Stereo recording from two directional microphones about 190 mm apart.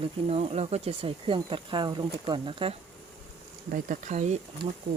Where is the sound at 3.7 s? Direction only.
45° right (ahead or behind).